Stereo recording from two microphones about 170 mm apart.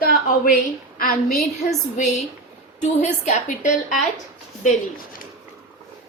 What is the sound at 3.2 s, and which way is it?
Speech, 45° left (ahead or behind).